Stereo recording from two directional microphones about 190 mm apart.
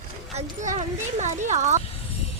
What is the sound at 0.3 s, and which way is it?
Speech, 35° right (ahead or behind).